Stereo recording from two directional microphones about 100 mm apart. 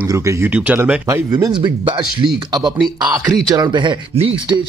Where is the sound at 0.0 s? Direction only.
30° right (ahead or behind).